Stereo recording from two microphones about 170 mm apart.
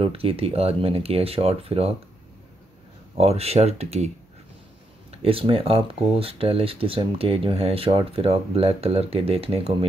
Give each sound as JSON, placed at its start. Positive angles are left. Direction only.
{"t": 0.0, "sound": "speech", "side_deg": -35}
{"t": 3.2, "sound": "speech", "side_deg": -35}
{"t": 5.2, "sound": "speech", "side_deg": -35}